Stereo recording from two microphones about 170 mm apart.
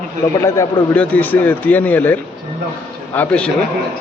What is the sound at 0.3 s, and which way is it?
Speech, 15° left (ahead or behind).